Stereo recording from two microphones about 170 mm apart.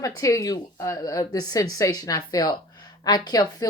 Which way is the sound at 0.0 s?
20° left (ahead or behind).